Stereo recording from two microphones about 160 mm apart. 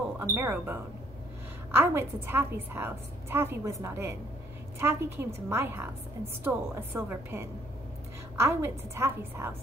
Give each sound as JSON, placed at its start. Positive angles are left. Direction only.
{"t": 0.2, "sound": "a woman's voice", "side_deg": -15}